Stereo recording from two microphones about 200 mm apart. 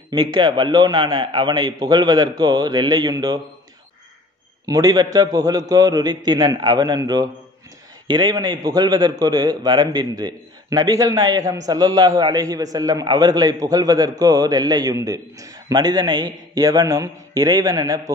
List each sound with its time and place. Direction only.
0.1 s a man's voice: 20° right (ahead or behind)
4.6 s a man's voice: 20° right (ahead or behind)